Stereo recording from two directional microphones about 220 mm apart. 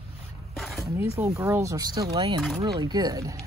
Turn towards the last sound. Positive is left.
turn(degrees=-15)  # may be behind; listen again after turning